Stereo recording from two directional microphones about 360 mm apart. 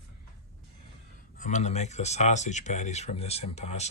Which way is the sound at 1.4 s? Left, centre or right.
Centre.